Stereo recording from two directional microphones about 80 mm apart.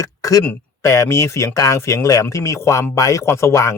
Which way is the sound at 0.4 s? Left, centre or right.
Left.